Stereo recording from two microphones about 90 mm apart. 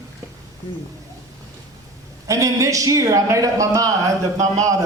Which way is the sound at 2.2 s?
35° right (ahead or behind).